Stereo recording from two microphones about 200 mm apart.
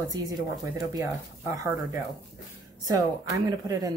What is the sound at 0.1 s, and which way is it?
Speech, 20° right (ahead or behind).